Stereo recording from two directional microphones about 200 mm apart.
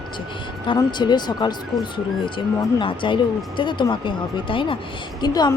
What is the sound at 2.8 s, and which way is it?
Speech, 25° left (ahead or behind).